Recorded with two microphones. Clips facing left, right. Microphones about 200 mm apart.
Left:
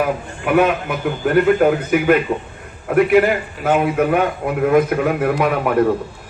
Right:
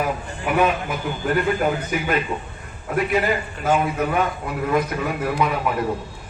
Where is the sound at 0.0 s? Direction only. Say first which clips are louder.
Left 4 dB; 55° left (ahead or behind).